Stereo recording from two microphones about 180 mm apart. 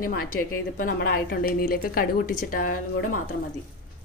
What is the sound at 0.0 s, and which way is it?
A woman's voice, 50° left (ahead or behind).